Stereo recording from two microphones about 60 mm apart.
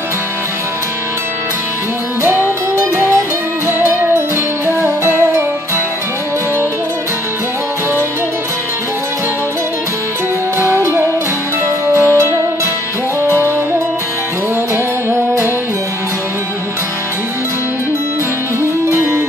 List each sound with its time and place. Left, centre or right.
2.2 s music: right
10.6 s music: right
15.0 s music: right
18.9 s music: right